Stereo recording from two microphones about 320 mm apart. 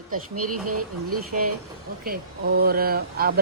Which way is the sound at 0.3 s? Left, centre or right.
Right.